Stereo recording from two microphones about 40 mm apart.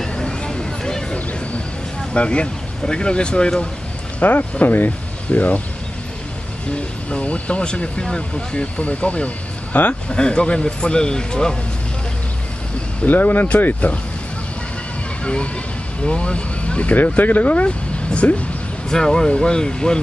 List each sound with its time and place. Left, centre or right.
0.2 s a sound: left
2.1 s speech: left
4.2 s speech: left
6.7 s speech: left
13.0 s speech: left
15.2 s speech: left
17.2 s speech: left
18.9 s speech: centre